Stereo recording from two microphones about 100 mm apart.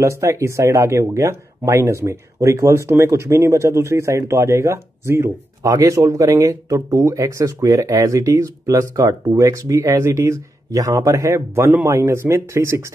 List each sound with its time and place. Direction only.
0.0 s speech: 30° right (ahead or behind)